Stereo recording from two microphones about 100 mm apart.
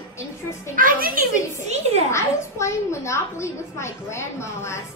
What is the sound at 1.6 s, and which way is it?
Speech, 90° right.